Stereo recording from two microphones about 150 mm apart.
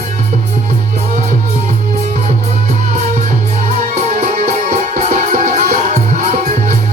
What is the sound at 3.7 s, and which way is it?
Music, 50° right (ahead or behind).